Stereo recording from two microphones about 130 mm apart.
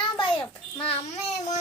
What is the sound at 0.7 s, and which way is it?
Speech, 45° left (ahead or behind).